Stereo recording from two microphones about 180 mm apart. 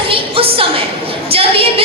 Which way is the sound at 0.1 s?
30° right (ahead or behind).